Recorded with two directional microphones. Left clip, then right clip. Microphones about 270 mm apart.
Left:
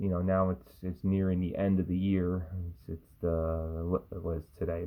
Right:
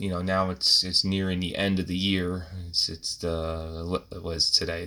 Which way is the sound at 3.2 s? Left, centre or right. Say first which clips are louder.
Even; right.